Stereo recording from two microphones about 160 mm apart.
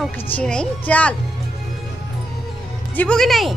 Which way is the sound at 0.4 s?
5° left (ahead or behind).